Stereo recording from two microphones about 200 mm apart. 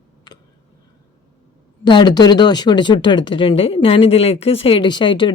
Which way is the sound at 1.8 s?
20° left (ahead or behind).